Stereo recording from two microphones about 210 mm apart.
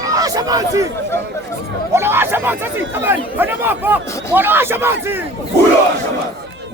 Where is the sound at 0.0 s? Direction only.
15° right (ahead or behind).